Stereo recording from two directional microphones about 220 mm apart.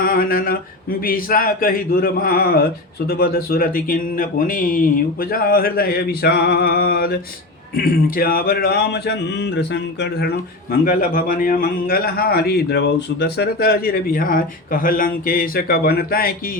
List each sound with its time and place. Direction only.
0.0 s a sound: 40° left (ahead or behind)
5.2 s a man's voice: 40° left (ahead or behind)
10.7 s a man's voice: 40° left (ahead or behind)